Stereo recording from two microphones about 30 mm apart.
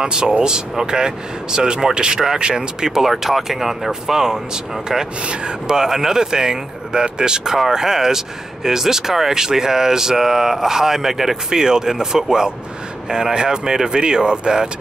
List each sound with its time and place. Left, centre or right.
0.0 s speech: right
2.9 s speech: centre
5.2 s speech: right
5.7 s speech: centre
11.5 s speech: right